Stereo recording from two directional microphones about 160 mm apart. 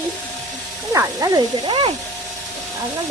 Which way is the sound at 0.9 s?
20° right (ahead or behind).